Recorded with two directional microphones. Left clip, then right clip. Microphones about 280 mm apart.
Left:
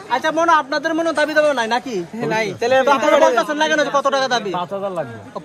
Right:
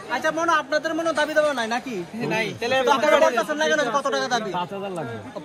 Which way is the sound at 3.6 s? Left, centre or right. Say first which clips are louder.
Left 5 dB; left.